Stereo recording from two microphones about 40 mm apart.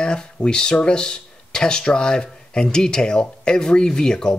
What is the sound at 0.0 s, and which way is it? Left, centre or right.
Speech, left.